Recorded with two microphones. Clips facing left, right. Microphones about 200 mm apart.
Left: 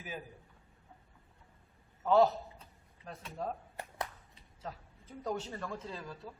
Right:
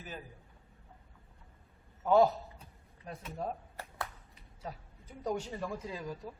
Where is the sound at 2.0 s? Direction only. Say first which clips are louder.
Right 1 dB; 15° right (ahead or behind).